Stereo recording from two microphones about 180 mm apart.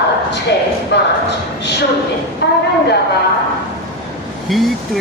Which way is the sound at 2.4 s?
65° left (ahead or behind).